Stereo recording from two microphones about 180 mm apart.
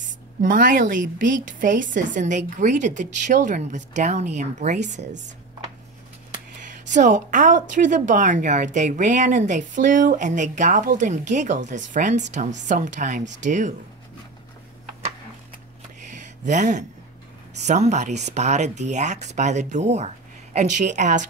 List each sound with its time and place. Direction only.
0.4 s a woman's voice: 50° right (ahead or behind)
6.8 s a woman's voice: 45° right (ahead or behind)
16.1 s a sound: 45° right (ahead or behind)
17.6 s a woman's voice: 40° right (ahead or behind)